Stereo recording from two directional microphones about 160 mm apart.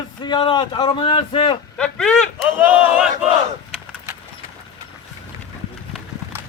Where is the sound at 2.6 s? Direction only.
10° right (ahead or behind).